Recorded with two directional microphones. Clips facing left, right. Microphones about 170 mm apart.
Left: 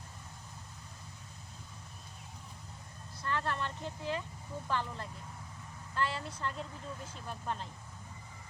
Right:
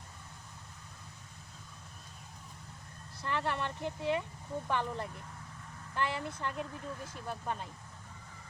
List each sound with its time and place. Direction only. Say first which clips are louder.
3.2 s speech: right 1 dB; 20° right (ahead or behind)